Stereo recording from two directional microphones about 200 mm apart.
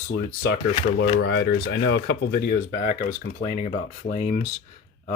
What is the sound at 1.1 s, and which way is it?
Speech, 55° left (ahead or behind).